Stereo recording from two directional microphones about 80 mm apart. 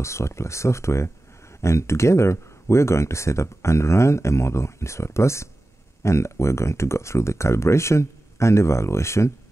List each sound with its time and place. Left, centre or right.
0.0 s speech: left